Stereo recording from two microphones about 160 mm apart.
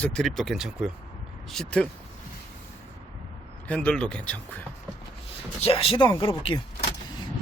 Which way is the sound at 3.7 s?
5° left (ahead or behind).